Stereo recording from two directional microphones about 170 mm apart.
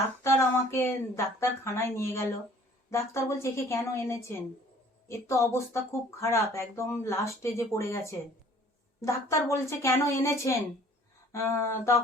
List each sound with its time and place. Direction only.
0.2 s speech: 15° left (ahead or behind)